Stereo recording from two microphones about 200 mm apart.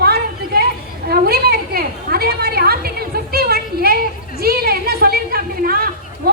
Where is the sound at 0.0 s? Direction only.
50° right (ahead or behind).